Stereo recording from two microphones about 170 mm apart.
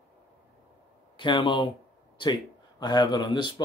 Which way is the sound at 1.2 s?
30° left (ahead or behind).